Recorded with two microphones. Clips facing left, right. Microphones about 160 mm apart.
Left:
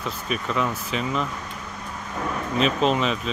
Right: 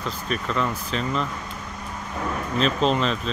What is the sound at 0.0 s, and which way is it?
Speech, 5° left (ahead or behind).